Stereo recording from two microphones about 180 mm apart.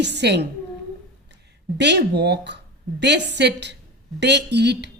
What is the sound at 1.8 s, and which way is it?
A woman's voice, 70° right (ahead or behind).